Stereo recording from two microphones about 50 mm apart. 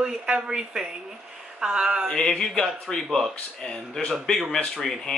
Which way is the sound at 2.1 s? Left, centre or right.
Centre.